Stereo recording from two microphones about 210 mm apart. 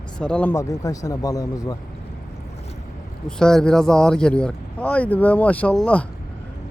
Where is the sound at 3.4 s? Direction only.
5° left (ahead or behind).